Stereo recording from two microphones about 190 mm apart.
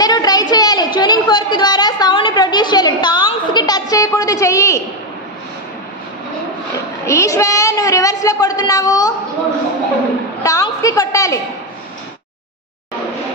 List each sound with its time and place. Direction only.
0.0 s a sound: 20° left (ahead or behind)
7.1 s a woman's voice: 15° left (ahead or behind)
10.4 s a woman's voice: 20° left (ahead or behind)